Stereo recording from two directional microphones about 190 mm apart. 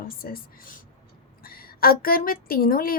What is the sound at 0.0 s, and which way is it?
Speech, 50° left (ahead or behind).